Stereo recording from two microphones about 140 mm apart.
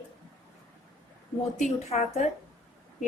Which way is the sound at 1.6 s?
60° left (ahead or behind).